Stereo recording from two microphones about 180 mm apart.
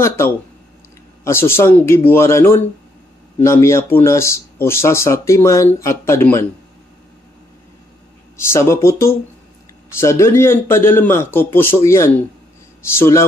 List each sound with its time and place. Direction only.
1.2 s a man's voice: 15° left (ahead or behind)
8.5 s a man's voice: 15° left (ahead or behind)